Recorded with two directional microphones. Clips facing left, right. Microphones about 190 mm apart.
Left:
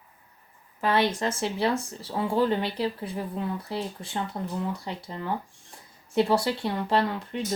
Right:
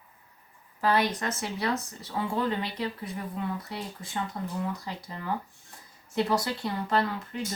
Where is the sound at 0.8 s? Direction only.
25° left (ahead or behind).